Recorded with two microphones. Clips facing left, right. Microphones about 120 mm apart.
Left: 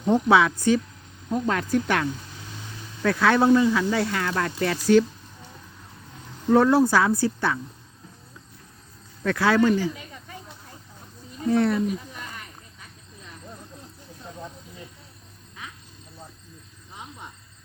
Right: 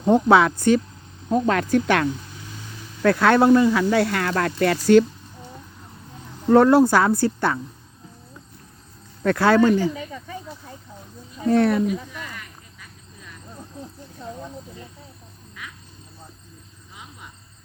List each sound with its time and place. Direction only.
0.1 s speech: 50° right (ahead or behind)
1.3 s speech: 80° right
3.0 s speech: 55° right (ahead or behind)
6.5 s a woman's voice: 55° right (ahead or behind)
9.2 s speech: 50° right (ahead or behind)
11.4 s speech: 70° right (ahead or behind)